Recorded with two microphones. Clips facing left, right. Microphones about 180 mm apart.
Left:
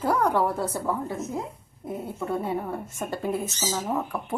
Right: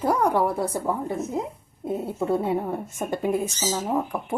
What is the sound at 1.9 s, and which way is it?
A woman's voice, 25° right (ahead or behind).